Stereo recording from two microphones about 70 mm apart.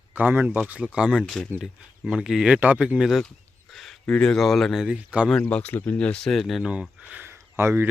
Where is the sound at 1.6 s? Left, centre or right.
Centre.